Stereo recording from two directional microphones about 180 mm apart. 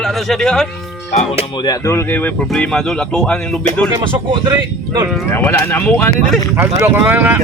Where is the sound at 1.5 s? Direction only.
25° left (ahead or behind); by 3.5 s 5° left (ahead or behind).